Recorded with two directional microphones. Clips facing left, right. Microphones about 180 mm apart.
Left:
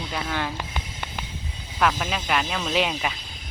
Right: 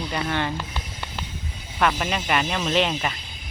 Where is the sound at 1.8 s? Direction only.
5° right (ahead or behind).